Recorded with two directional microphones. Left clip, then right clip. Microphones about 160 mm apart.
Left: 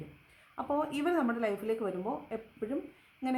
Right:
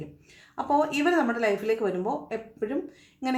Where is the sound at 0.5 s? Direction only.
20° left (ahead or behind).